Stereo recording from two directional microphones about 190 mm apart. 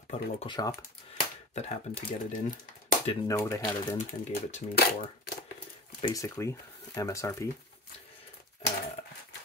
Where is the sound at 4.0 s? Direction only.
35° left (ahead or behind).